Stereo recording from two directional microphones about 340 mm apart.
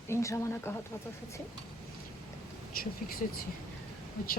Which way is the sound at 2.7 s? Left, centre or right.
Left.